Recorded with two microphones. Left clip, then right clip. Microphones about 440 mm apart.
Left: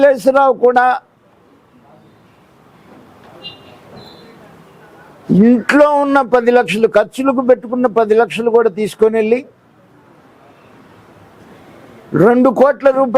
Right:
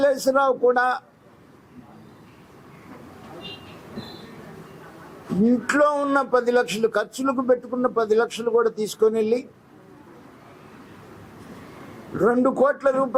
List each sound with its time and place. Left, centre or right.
0.0 s speech: left
5.6 s speech: left
12.2 s speech: left